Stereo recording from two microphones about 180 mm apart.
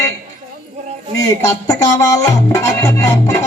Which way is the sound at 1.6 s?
20° left (ahead or behind).